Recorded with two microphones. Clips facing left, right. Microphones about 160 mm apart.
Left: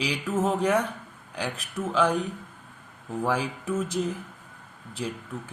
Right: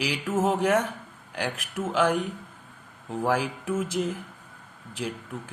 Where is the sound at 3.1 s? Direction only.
15° right (ahead or behind).